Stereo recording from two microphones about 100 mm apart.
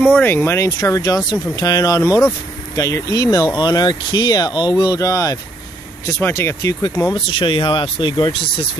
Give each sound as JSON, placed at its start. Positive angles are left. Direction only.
{"t": 0.2, "sound": "speech", "side_deg": 20}
{"t": 7.2, "sound": "speech", "side_deg": 60}
{"t": 8.3, "sound": "speech", "side_deg": 70}